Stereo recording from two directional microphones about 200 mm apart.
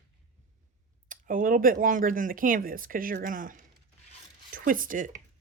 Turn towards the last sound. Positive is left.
turn(degrees=-40)  # may be behind; listen again after turning